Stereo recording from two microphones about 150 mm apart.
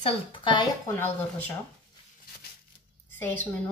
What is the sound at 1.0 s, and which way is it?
Speech, 10° left (ahead or behind).